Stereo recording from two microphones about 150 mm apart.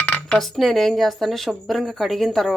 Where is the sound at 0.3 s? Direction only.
Centre (ahead or behind).